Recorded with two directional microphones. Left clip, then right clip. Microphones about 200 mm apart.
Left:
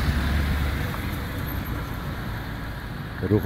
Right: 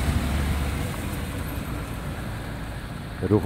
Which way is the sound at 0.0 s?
45° right (ahead or behind).